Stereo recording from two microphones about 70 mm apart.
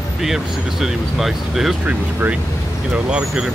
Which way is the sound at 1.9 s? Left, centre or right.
Right.